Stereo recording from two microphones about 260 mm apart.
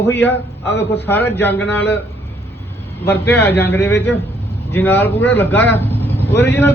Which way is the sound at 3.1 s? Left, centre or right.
Centre.